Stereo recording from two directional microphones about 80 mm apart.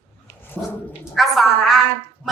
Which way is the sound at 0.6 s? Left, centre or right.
Centre.